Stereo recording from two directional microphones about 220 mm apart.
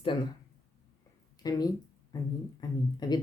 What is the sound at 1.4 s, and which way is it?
Speech, 15° left (ahead or behind).